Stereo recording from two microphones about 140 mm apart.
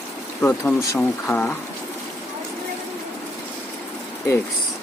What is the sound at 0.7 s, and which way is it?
Speech, 5° left (ahead or behind).